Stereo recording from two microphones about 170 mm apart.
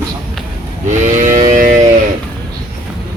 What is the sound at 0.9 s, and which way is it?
Moo, 45° right (ahead or behind).